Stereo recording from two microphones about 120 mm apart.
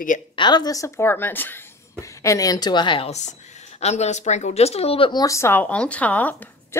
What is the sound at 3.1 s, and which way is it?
Speech, 75° left (ahead or behind).